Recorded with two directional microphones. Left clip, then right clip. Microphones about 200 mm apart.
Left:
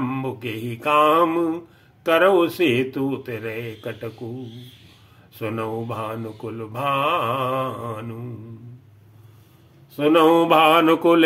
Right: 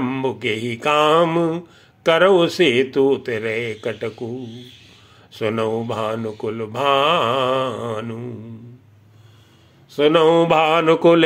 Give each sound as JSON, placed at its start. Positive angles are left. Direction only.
{"t": 0.0, "sound": "mantra", "side_deg": -30}
{"t": 5.3, "sound": "mantra", "side_deg": -30}
{"t": 9.9, "sound": "mantra", "side_deg": -30}